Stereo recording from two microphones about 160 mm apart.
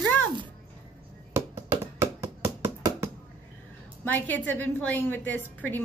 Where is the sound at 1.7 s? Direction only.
20° right (ahead or behind).